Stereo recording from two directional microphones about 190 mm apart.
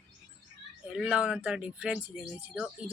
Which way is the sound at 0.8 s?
5° right (ahead or behind).